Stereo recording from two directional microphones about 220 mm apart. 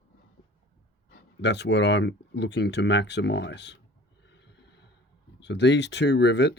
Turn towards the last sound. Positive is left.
turn(degrees=50)  # may be behind; listen again after turning